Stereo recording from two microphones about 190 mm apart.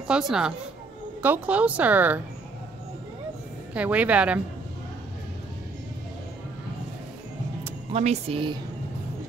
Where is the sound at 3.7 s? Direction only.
5° right (ahead or behind).